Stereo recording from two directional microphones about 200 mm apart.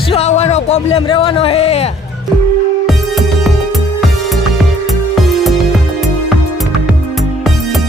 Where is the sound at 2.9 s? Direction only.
Centre (ahead or behind).